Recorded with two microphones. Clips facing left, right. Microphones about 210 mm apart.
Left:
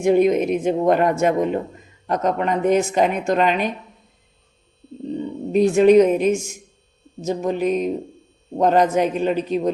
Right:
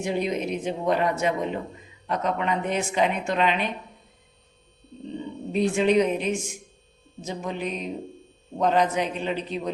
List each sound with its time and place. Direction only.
0.0 s a woman's voice: 50° left (ahead or behind)
5.5 s a woman's voice: 45° left (ahead or behind)